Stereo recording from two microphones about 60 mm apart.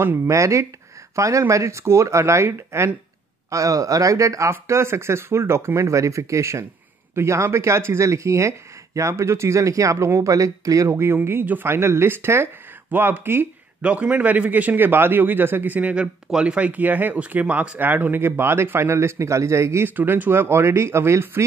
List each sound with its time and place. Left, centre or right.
0.3 s speech: right
3.4 s speech: right
10.9 s speech: right
13.8 s a man's voice: right
16.3 s speech: centre; by 19.9 s right
20.0 s speech: right